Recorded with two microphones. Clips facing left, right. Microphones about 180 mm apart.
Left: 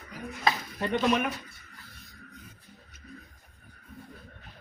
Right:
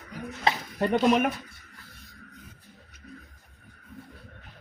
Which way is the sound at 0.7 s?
45° right (ahead or behind).